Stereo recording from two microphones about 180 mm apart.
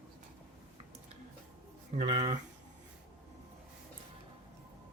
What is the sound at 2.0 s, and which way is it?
Speech, 40° right (ahead or behind).